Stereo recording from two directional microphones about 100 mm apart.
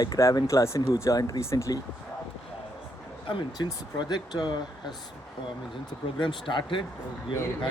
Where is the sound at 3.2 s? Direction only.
55° left (ahead or behind).